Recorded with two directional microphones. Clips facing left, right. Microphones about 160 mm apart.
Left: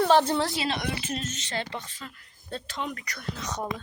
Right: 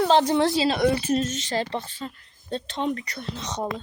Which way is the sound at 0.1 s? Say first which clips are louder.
Right 3 dB; 20° right (ahead or behind).